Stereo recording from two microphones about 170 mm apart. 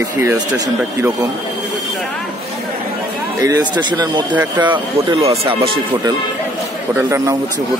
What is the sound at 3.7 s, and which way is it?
Speech, 25° right (ahead or behind).